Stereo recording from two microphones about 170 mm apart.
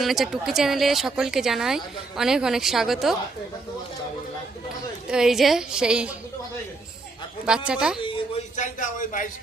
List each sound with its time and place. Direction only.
0.0 s speech: centre (ahead or behind)
5.0 s speech: 5° right (ahead or behind)
7.4 s speech: 5° right (ahead or behind)
8.5 s a sound: 50° left (ahead or behind)